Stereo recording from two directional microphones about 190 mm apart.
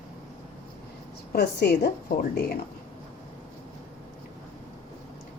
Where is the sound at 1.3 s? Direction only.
55° left (ahead or behind).